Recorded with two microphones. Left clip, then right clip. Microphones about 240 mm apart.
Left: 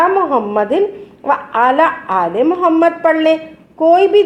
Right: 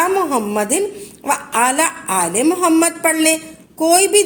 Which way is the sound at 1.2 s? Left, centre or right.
Right.